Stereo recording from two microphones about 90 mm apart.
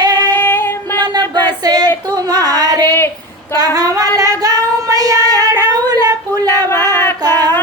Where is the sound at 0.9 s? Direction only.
50° right (ahead or behind).